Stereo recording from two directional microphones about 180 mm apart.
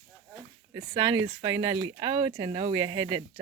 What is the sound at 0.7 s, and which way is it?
Speech, 25° right (ahead or behind).